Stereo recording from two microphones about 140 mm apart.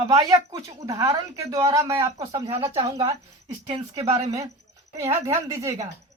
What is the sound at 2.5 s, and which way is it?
Speech, 40° right (ahead or behind).